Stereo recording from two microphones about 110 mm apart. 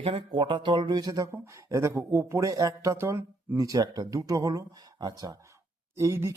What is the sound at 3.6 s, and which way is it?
Speech, 35° right (ahead or behind).